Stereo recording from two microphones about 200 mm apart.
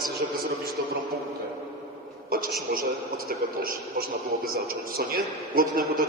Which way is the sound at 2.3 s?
45° right (ahead or behind).